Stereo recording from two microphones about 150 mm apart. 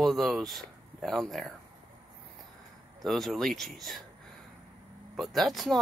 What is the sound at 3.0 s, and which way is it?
Speech, centre (ahead or behind).